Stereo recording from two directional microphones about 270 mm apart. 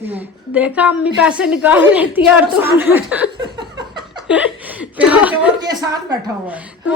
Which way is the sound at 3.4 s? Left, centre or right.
Centre.